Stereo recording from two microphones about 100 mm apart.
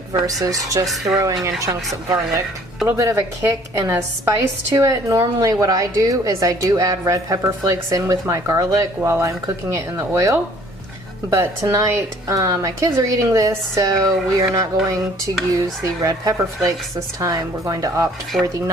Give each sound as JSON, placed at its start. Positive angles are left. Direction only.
{"t": 0.1, "sound": "speech", "side_deg": -35}
{"t": 16.0, "sound": "speech", "side_deg": -40}
{"t": 18.3, "sound": "speech", "side_deg": 0}